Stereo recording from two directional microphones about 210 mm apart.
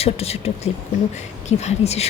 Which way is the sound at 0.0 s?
30° left (ahead or behind).